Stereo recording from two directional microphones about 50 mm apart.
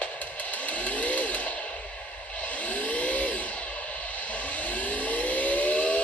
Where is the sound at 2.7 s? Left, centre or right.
Left.